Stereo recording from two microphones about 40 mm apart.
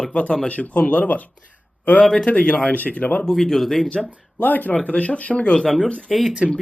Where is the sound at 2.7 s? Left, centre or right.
Left.